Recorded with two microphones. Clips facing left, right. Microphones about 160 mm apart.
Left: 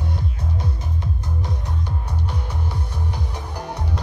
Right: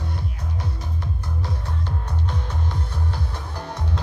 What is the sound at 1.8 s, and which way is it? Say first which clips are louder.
Music: even; 10° left (ahead or behind).